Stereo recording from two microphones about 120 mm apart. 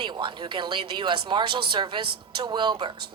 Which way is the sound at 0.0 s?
40° right (ahead or behind).